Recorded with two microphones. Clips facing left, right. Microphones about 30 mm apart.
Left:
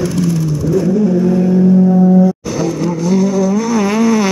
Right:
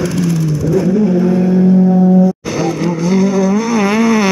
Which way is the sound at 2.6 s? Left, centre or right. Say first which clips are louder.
Right 1 dB; right.